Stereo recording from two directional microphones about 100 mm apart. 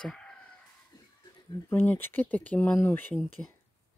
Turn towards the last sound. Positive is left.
turn(degrees=20)  # may be behind; listen again after turning